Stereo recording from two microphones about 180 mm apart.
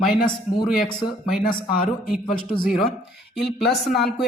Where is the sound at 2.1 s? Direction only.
5° left (ahead or behind).